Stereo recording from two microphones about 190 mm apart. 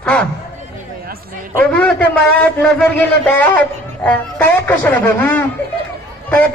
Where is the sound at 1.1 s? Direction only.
50° right (ahead or behind).